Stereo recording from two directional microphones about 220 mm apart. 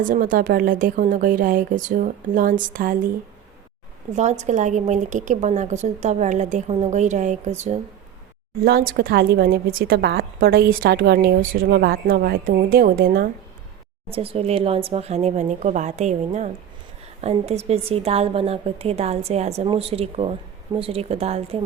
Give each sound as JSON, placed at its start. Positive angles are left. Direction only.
{"t": 0.0, "sound": "a woman's voice", "side_deg": -40}
{"t": 4.1, "sound": "a woman's voice", "side_deg": -30}
{"t": 14.1, "sound": "a woman's voice", "side_deg": -25}